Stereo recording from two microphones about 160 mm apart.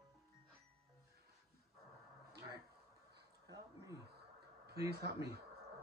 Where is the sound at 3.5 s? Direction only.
20° right (ahead or behind).